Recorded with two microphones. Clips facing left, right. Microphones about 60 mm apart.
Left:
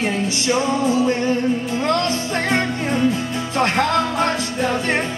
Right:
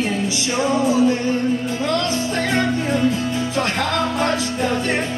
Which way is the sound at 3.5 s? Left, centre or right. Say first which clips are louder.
Left 6 dB; left.